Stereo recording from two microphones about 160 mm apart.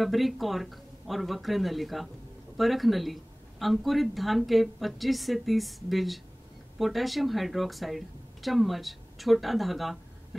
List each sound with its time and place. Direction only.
0.0 s speech: centre (ahead or behind)